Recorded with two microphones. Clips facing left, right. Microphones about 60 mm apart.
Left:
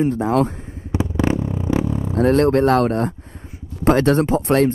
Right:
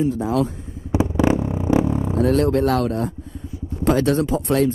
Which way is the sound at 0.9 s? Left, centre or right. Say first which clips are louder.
Right 2 dB; centre.